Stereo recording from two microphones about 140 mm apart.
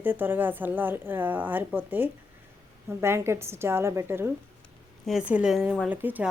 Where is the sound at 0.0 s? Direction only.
15° right (ahead or behind).